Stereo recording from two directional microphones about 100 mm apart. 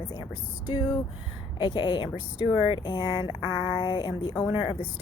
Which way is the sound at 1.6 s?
50° left (ahead or behind).